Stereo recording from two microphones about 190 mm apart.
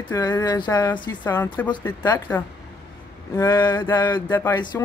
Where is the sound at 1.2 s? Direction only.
10° left (ahead or behind).